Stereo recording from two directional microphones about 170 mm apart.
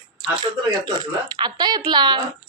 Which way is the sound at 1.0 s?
25° right (ahead or behind).